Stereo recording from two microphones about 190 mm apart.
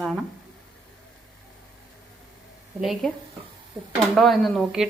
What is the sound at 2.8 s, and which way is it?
Speech, centre (ahead or behind).